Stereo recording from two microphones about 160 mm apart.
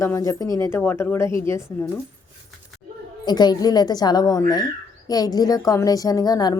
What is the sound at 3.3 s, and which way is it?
A woman's voice, 25° left (ahead or behind).